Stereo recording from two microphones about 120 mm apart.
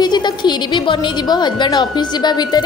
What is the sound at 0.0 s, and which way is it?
A woman's voice, 35° left (ahead or behind).